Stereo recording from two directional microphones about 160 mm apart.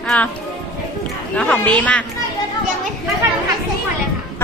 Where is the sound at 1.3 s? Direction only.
5° left (ahead or behind).